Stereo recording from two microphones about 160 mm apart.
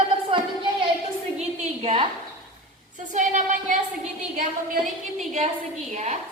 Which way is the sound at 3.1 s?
50° right (ahead or behind).